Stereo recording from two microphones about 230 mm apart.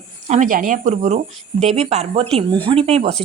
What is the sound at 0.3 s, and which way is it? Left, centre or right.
A woman's voice, right.